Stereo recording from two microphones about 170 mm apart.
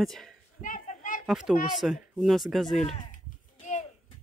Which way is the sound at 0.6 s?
50° left (ahead or behind).